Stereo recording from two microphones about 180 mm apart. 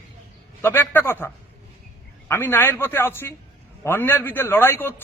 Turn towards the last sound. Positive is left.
turn(degrees=15)  # may be behind; listen again after turning